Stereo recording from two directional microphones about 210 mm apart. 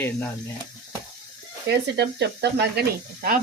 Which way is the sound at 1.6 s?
55° right (ahead or behind).